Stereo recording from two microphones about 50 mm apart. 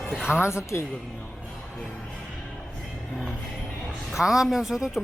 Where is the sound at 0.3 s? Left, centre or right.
Left.